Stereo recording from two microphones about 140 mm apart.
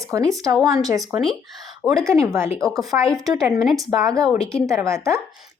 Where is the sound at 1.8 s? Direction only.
25° right (ahead or behind).